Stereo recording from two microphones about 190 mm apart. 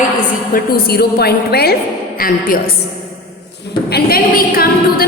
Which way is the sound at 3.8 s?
55° left (ahead or behind).